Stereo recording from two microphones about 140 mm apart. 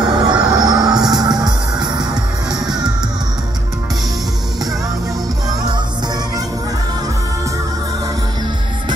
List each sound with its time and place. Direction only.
0.0 s music: 30° right (ahead or behind)